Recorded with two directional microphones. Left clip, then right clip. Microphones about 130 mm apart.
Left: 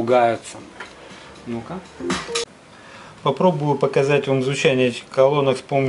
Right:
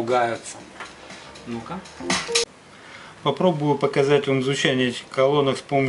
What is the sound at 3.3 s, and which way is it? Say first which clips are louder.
Speech: left 2 dB; 10° left (ahead or behind).